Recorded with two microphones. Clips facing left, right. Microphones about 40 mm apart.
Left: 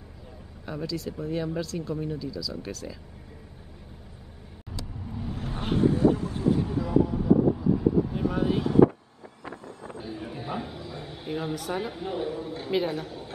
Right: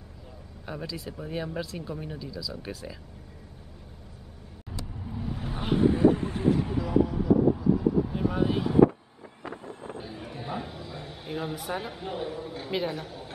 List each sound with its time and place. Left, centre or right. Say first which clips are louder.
0.7 s speech: left 4 dB; centre
5.0 s vehicle: even; centre
5.9 s a sound: right 1 dB; right
6.8 s vehicle: left 1 dB; centre
9.6 s vehicle: right 1 dB; right
10.0 s a sound: left 6 dB; centre
11.7 s a woman's voice: left 3 dB; centre